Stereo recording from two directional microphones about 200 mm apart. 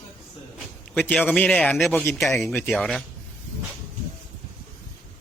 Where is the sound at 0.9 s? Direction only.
10° left (ahead or behind).